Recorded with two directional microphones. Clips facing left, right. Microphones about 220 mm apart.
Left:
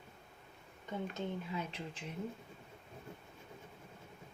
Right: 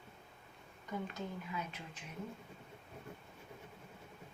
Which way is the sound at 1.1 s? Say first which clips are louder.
Left 3 dB; 25° left (ahead or behind).